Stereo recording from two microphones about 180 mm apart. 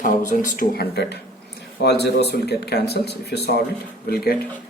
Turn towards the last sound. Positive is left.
turn(degrees=60)  # may be behind; listen again after turning